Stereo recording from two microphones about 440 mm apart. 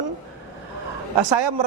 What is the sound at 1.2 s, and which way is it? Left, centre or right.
Speech, right.